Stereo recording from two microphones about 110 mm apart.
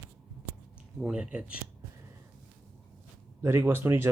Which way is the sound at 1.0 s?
10° right (ahead or behind).